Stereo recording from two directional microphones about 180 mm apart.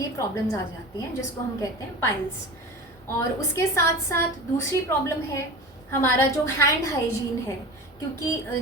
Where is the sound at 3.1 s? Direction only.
15° left (ahead or behind).